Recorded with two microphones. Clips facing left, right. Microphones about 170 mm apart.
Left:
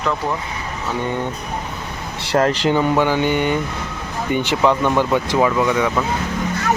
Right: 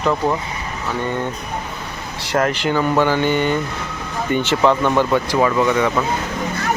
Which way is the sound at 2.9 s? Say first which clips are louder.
Even; 10° left (ahead or behind).